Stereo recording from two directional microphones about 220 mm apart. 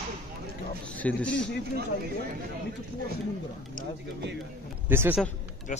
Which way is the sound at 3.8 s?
40° left (ahead or behind).